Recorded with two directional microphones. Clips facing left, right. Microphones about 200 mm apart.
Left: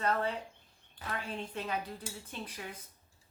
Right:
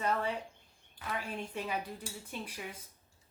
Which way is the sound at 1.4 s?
10° right (ahead or behind).